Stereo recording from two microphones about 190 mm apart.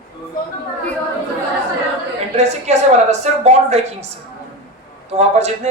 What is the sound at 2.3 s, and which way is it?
Speech, 35° right (ahead or behind).